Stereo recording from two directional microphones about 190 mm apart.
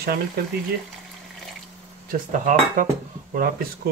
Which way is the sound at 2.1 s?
45° right (ahead or behind).